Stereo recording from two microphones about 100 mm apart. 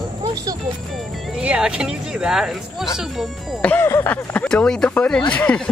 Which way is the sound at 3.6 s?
20° left (ahead or behind).